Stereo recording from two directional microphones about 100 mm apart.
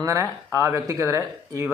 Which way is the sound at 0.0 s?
30° right (ahead or behind).